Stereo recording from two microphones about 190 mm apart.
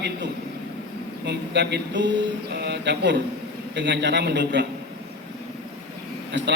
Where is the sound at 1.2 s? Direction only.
65° right (ahead or behind).